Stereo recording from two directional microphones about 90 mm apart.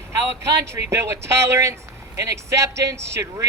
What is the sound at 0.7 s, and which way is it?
Speech, 30° right (ahead or behind).